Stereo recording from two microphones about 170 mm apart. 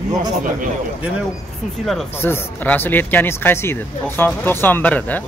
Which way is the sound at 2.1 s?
15° left (ahead or behind).